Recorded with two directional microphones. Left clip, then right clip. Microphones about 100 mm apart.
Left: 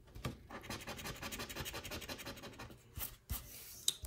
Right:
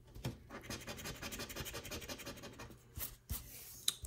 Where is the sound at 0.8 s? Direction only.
60° right (ahead or behind).